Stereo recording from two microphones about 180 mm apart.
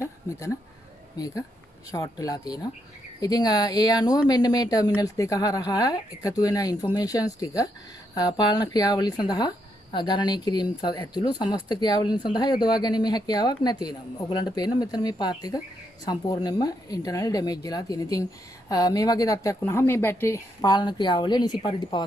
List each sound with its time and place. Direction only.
1.1 s speech: 20° left (ahead or behind)